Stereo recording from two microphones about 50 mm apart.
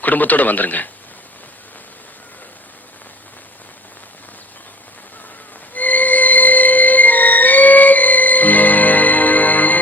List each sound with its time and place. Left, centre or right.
0.0 s speech: left
5.7 s music: left